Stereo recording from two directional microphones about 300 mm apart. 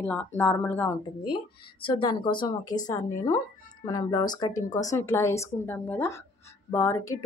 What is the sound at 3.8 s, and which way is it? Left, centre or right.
A woman's voice, centre.